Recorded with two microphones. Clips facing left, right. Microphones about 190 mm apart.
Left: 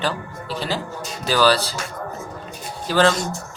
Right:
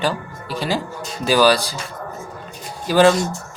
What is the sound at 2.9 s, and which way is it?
Speech, 15° right (ahead or behind).